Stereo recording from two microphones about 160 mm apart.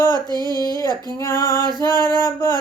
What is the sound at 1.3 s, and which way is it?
Female singing, 25° right (ahead or behind).